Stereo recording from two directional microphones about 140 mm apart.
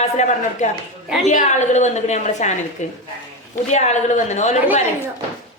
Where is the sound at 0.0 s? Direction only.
55° left (ahead or behind).